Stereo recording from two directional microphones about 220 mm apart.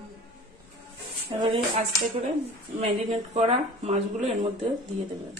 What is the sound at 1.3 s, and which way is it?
Speech, 25° right (ahead or behind).